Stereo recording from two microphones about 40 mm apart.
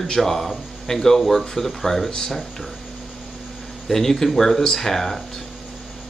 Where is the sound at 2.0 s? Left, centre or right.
Centre.